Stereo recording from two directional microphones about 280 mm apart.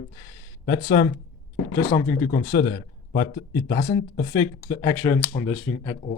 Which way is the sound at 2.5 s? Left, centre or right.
Left.